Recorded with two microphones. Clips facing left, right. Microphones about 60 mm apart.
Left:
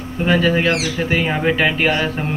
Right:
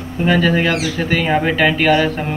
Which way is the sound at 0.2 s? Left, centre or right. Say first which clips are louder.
Right 1 dB; centre.